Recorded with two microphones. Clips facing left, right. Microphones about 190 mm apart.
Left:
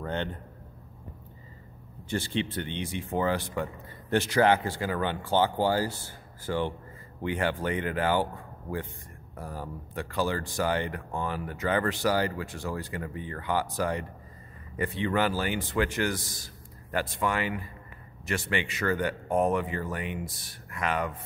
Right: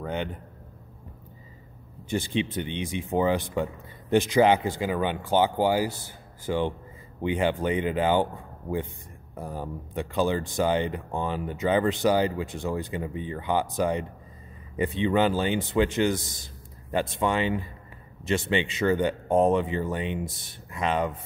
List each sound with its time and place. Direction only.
0.0 s a man's voice: 10° right (ahead or behind)
2.0 s speech: 15° right (ahead or behind)